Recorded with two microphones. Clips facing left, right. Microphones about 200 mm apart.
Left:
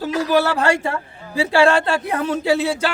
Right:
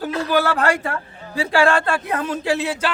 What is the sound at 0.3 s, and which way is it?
A man's voice, 25° left (ahead or behind).